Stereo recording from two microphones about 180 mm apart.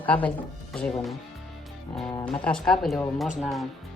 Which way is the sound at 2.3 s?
5° left (ahead or behind).